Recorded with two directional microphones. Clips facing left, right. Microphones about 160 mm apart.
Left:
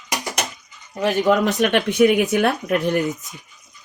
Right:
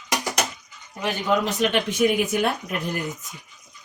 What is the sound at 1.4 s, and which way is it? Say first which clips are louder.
Speech: left 4 dB; 65° left (ahead or behind).